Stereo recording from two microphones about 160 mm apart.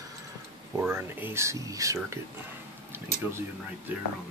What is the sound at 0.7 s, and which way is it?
Speech, 15° right (ahead or behind).